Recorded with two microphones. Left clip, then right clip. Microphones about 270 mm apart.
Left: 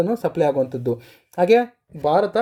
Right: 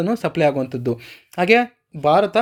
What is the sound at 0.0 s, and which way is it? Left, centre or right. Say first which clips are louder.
Speech: right 1 dB; centre.